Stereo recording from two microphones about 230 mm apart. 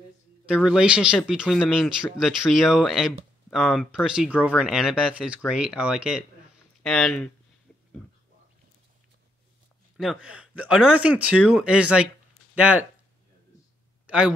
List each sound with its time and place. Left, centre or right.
0.5 s speech: centre
9.9 s speech: centre
10.4 s a sound: left
10.7 s speech: centre
11.1 s speech: left
12.5 s speech: centre
14.0 s a sound: centre